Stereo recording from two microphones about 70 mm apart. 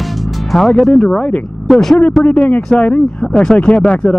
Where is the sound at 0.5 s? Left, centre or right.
Centre.